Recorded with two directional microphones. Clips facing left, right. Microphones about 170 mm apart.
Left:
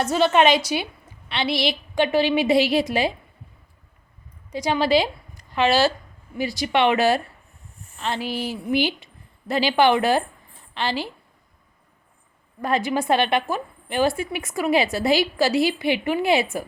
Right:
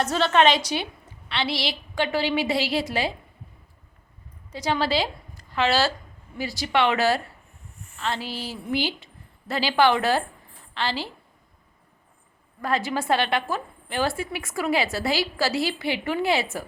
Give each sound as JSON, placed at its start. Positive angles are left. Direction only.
{"t": 0.0, "sound": "a woman's voice", "side_deg": 10}
{"t": 4.5, "sound": "a woman's voice", "side_deg": 15}
{"t": 12.6, "sound": "a woman's voice", "side_deg": 20}